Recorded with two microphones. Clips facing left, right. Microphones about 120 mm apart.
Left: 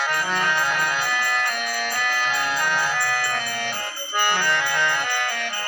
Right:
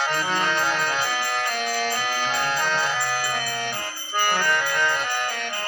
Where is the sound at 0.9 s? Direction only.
35° right (ahead or behind).